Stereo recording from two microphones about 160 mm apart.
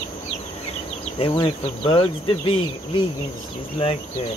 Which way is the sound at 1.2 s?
30° left (ahead or behind).